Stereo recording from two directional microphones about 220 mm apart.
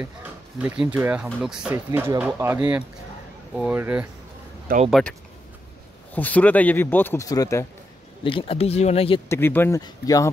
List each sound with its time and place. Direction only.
0.6 s speech: 5° right (ahead or behind)
4.7 s speech: 40° right (ahead or behind)
6.1 s speech: 5° left (ahead or behind); by 9.2 s 25° left (ahead or behind)
9.3 s speech: 10° left (ahead or behind)